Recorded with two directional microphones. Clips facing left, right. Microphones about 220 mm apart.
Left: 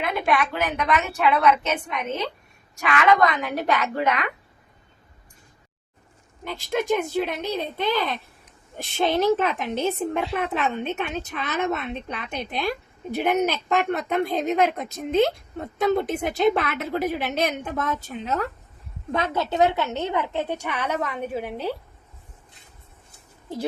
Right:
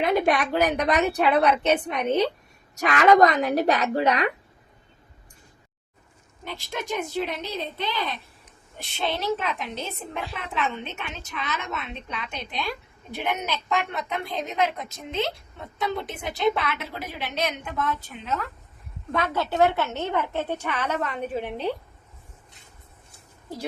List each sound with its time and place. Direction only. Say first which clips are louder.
0.0 s a woman's voice: right 2 dB; 35° right (ahead or behind)
6.4 s speech: left 7 dB; 50° left (ahead or behind)
19.1 s a woman's voice: left 1 dB; 20° left (ahead or behind)